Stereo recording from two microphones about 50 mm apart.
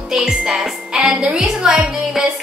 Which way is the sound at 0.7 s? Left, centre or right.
Centre.